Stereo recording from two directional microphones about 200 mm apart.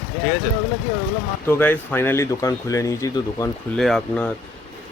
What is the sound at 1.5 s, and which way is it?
Speech, 10° left (ahead or behind).